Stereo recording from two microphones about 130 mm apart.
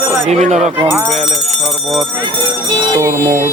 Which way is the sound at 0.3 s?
60° right (ahead or behind).